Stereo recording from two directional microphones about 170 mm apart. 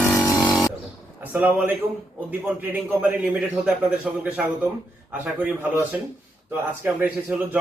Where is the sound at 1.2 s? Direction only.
10° right (ahead or behind).